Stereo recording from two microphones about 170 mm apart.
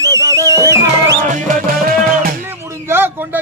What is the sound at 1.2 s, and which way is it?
Music, 55° right (ahead or behind).